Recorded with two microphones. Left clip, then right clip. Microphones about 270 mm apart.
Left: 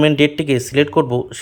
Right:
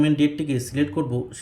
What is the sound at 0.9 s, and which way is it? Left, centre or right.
Speech, left.